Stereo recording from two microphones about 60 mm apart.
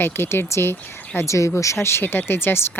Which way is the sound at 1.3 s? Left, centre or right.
Left.